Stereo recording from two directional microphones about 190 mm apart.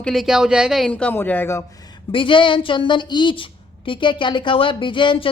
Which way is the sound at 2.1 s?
25° left (ahead or behind).